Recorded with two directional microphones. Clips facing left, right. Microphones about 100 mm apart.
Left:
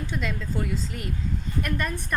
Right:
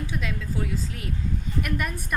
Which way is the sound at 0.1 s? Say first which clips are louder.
Left 1 dB; 5° right (ahead or behind).